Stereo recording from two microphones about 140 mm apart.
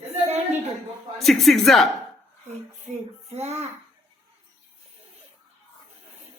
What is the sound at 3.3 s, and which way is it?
Speech, 50° right (ahead or behind).